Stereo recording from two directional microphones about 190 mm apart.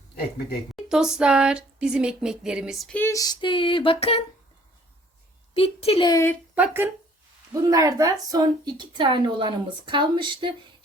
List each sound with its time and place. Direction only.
0.9 s a sound: 5° right (ahead or behind); by 4.2 s 30° left (ahead or behind)
5.5 s speech: 30° left (ahead or behind)
6.5 s a woman's voice: 10° right (ahead or behind)